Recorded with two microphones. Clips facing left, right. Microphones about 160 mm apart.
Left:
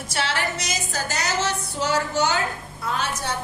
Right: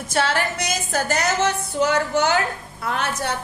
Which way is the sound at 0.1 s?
50° right (ahead or behind).